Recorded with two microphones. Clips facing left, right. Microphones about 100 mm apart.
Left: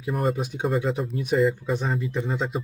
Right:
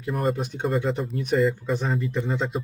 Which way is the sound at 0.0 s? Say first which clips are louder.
Even; centre (ahead or behind).